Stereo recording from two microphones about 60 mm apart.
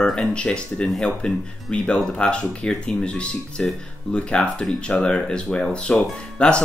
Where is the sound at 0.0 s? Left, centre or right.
Centre.